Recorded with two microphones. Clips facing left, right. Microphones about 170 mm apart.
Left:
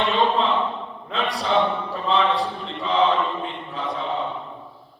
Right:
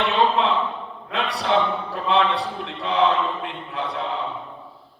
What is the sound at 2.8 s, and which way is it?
Mantra, 65° right (ahead or behind).